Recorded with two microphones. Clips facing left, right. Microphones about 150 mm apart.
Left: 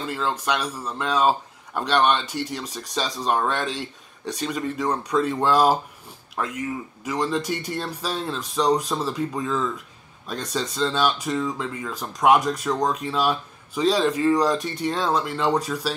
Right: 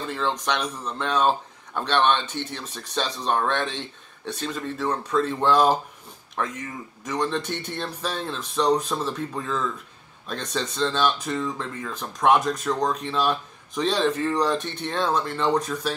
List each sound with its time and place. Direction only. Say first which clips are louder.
0.0 s speech: even; 10° left (ahead or behind)